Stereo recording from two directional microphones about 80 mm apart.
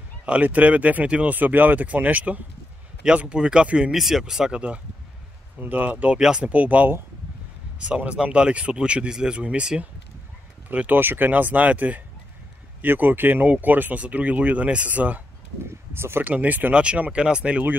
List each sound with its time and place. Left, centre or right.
0.2 s speech: centre
15.9 s speech: right
16.3 s speech: right